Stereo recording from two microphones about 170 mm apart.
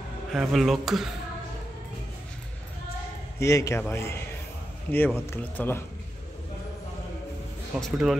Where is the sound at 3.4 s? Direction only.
20° left (ahead or behind).